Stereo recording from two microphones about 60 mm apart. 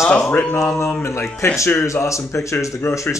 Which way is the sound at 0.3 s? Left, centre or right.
Left.